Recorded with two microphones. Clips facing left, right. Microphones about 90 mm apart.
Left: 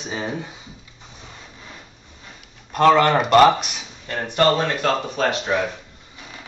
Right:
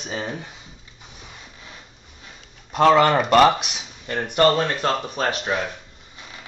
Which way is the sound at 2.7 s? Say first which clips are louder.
Even; 10° right (ahead or behind).